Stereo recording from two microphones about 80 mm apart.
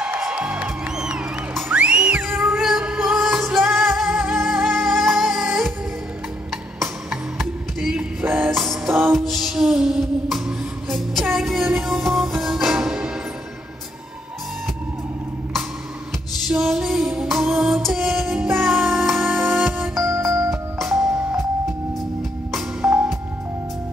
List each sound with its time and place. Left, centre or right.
0.2 s music: centre
2.5 s music: centre
7.3 s music: centre
8.0 s music: right
8.5 s music: centre
8.8 s music: right
9.1 s music: centre
16.4 s music: centre
20.0 s music: right
20.8 s music: centre
22.8 s music: centre